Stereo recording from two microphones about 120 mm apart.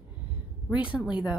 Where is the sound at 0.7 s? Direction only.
10° right (ahead or behind).